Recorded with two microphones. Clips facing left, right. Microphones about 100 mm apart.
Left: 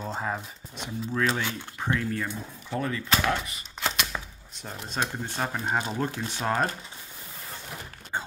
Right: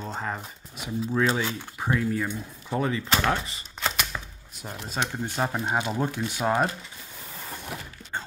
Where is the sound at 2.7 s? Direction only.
20° right (ahead or behind).